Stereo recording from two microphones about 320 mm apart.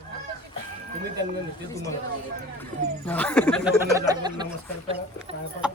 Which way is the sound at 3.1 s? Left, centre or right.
Centre.